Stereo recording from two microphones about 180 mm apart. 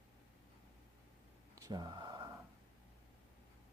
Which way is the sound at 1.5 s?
20° right (ahead or behind).